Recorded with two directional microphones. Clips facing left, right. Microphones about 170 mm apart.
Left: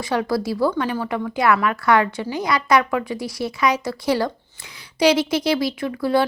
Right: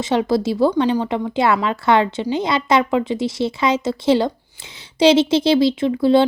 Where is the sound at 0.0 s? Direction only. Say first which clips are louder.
Right 4 dB; 25° right (ahead or behind).